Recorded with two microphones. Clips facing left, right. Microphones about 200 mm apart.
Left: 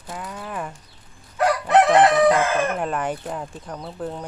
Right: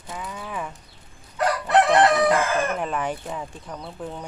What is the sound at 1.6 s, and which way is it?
Crowing, 15° left (ahead or behind).